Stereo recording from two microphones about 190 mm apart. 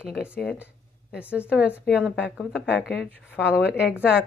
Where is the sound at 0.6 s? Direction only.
5° right (ahead or behind).